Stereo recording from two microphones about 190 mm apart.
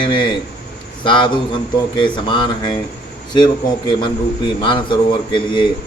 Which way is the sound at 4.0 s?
25° left (ahead or behind).